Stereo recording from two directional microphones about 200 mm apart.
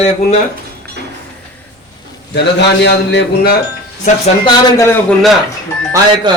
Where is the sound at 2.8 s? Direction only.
55° left (ahead or behind).